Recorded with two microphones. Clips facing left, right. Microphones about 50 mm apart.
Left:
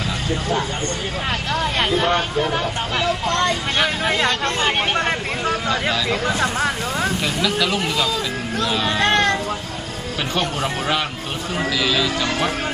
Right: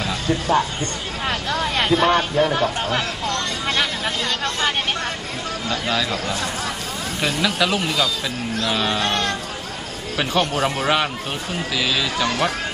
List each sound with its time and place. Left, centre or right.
1.5 s vehicle: centre
2.4 s speech: centre
3.3 s speech: left
7.4 s speech: centre
9.0 s a sound: left
10.3 s speech: centre